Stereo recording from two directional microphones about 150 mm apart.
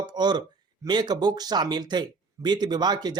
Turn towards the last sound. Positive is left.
turn(degrees=-30)  # may be behind; listen again after turning